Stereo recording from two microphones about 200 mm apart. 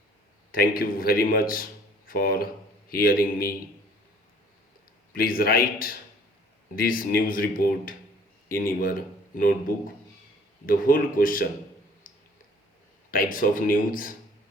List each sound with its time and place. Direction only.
0.5 s speech: 45° left (ahead or behind)
5.1 s speech: 45° left (ahead or behind)
12.1 s a sound: 45° left (ahead or behind)
13.1 s speech: 45° left (ahead or behind)